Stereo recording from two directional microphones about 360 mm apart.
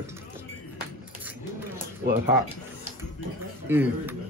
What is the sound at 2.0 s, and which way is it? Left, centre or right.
Speech, right.